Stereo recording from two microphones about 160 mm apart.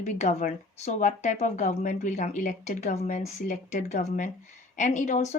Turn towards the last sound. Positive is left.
turn(degrees=45)  # may be behind; listen again after turning